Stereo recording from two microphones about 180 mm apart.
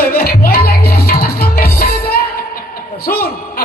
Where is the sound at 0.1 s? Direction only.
55° left (ahead or behind).